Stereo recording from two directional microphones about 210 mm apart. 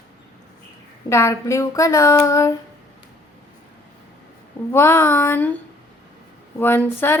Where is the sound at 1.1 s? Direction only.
15° left (ahead or behind).